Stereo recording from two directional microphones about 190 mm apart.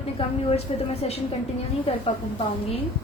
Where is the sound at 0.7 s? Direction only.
35° left (ahead or behind).